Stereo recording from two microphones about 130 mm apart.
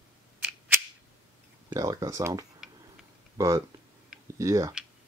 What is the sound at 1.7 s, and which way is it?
Speech, 25° right (ahead or behind).